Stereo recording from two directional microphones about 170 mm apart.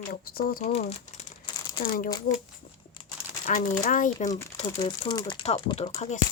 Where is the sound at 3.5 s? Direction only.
45° left (ahead or behind).